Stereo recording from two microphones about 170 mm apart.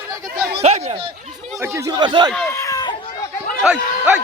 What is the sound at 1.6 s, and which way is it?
Speech, 15° right (ahead or behind).